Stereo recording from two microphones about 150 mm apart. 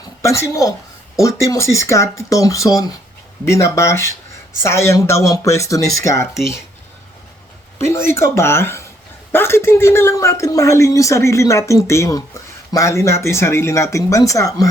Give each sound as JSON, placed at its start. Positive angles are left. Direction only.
{"t": 0.0, "sound": "a sound", "side_deg": 20}
{"t": 1.5, "sound": "speech", "side_deg": 20}
{"t": 7.8, "sound": "speech", "side_deg": 20}